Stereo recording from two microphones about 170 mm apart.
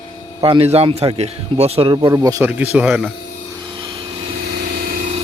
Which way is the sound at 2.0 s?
20° right (ahead or behind).